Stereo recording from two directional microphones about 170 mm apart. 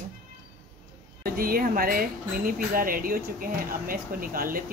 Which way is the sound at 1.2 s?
60° right (ahead or behind).